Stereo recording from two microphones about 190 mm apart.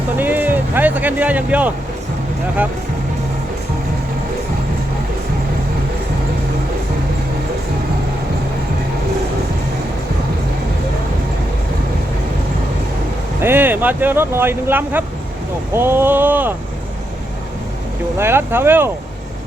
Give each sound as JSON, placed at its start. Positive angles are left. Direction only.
{"t": 0.2, "sound": "vehicle", "side_deg": -10}
{"t": 13.4, "sound": "speech", "side_deg": -10}
{"t": 18.2, "sound": "speech", "side_deg": -10}